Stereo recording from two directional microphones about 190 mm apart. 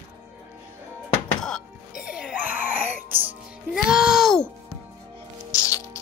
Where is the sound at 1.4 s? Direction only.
Centre (ahead or behind).